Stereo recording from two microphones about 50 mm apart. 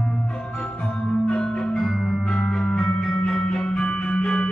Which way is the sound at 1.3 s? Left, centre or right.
Centre.